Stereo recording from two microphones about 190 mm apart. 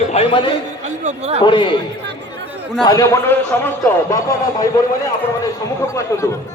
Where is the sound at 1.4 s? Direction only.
25° left (ahead or behind).